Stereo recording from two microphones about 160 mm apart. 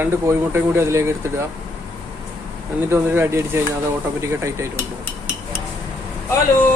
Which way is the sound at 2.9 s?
15° right (ahead or behind).